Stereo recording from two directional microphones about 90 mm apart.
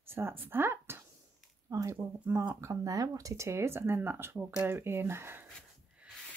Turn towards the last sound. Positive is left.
turn(degrees=-25)  # may be behind; listen again after turning